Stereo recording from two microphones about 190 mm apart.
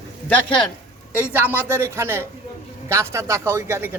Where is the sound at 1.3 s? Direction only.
10° right (ahead or behind).